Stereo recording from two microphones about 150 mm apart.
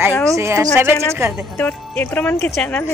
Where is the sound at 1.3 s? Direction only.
5° left (ahead or behind).